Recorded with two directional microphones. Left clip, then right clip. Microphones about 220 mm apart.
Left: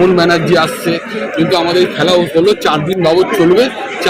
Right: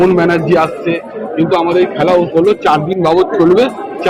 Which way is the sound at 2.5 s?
10° left (ahead or behind).